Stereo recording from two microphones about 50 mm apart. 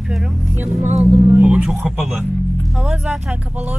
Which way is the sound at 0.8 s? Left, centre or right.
Right.